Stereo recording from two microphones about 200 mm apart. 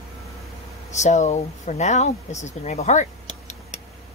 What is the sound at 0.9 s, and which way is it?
Speech, 35° left (ahead or behind).